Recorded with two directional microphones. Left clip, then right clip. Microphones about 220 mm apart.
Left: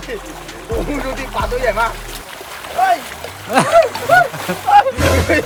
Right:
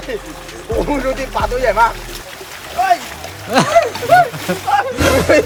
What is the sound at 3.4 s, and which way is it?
Speech, centre (ahead or behind).